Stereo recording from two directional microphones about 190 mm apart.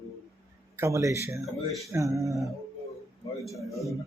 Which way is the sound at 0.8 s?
15° right (ahead or behind).